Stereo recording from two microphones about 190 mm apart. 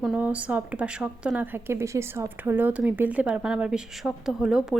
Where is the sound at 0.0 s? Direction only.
5° right (ahead or behind).